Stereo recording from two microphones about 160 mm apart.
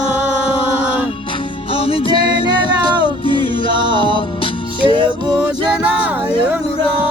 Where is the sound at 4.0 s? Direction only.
35° left (ahead or behind).